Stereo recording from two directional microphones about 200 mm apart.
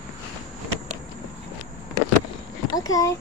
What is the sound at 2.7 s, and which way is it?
Speech, 15° left (ahead or behind).